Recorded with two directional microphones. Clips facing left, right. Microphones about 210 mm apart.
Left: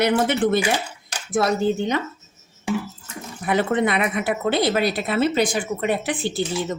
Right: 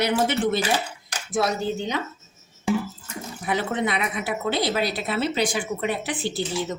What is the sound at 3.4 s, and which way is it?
Speech, 55° left (ahead or behind).